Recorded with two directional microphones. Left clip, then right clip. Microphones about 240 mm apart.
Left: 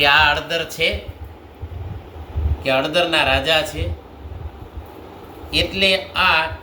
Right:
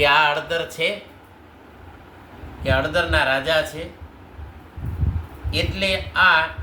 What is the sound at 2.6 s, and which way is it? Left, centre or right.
Speech, centre.